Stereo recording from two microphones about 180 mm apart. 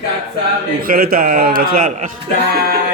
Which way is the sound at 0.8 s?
55° right (ahead or behind).